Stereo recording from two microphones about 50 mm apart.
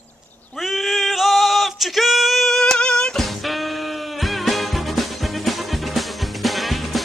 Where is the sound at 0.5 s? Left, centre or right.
Centre.